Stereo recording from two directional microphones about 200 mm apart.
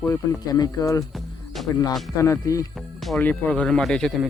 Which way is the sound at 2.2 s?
15° left (ahead or behind).